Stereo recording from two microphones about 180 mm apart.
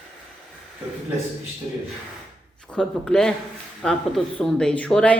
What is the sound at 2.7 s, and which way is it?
A woman's voice, 5° left (ahead or behind).